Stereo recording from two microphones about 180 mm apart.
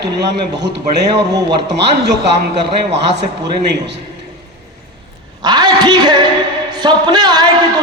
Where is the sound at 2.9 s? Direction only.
70° right (ahead or behind).